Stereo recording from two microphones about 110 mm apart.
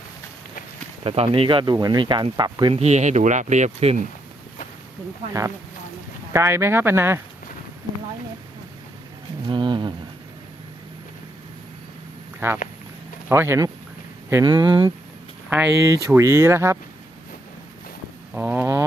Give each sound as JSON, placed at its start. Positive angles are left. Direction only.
{"t": 1.0, "sound": "speech", "side_deg": -60}
{"t": 2.7, "sound": "speech", "side_deg": -85}
{"t": 6.3, "sound": "speech", "side_deg": -25}
{"t": 9.5, "sound": "a sound", "side_deg": -45}
{"t": 12.4, "sound": "speech", "side_deg": -20}
{"t": 14.4, "sound": "speech", "side_deg": -45}
{"t": 15.4, "sound": "speech", "side_deg": -20}
{"t": 18.3, "sound": "speech", "side_deg": -20}